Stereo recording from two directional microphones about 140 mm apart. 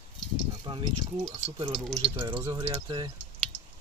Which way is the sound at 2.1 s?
20° right (ahead or behind).